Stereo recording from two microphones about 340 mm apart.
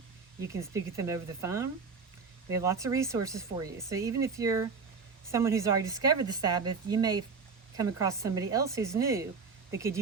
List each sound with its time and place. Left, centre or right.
0.5 s speech: centre